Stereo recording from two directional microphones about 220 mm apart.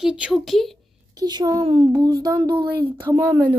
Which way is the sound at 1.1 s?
15° right (ahead or behind).